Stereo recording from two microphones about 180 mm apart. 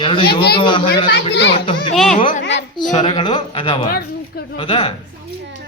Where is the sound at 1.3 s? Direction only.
70° left (ahead or behind).